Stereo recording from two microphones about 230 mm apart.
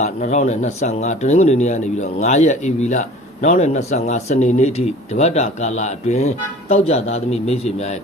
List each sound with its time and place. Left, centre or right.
0.0 s speech: left